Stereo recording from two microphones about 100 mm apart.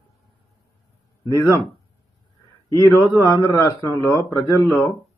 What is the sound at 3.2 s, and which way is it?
Speech, 40° left (ahead or behind).